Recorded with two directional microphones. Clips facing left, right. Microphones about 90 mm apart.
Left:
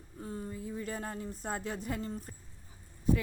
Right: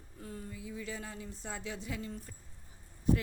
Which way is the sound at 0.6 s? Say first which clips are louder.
Left 2 dB; 45° left (ahead or behind).